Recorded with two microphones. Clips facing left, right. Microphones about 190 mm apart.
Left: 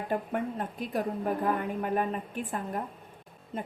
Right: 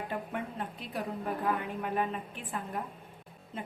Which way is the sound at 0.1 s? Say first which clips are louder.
Left 6 dB; 45° left (ahead or behind).